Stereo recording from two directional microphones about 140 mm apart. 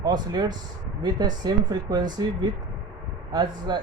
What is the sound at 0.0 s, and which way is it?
Speech, 30° right (ahead or behind).